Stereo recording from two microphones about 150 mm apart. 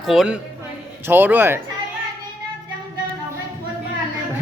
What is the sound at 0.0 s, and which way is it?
Speech, centre (ahead or behind).